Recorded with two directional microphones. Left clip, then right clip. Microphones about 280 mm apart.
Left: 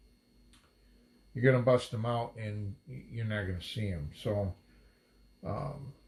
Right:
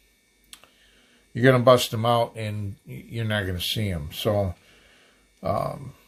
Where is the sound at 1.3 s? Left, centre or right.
Right.